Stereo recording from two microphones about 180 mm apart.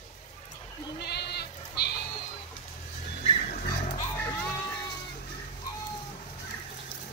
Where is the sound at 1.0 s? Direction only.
65° left (ahead or behind).